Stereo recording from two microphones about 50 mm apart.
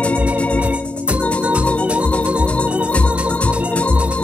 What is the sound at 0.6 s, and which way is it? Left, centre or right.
Organ, right.